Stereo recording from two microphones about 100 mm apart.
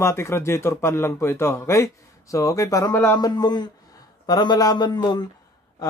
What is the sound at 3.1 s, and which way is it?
Speech, 45° left (ahead or behind).